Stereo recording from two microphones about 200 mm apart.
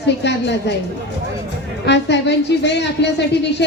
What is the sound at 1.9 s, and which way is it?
Speech, 60° left (ahead or behind).